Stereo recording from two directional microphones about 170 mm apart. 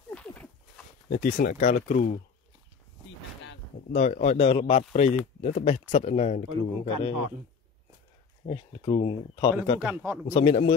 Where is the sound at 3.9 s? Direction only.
45° left (ahead or behind).